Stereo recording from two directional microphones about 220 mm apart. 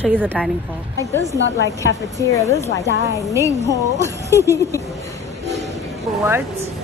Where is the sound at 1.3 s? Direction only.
55° left (ahead or behind).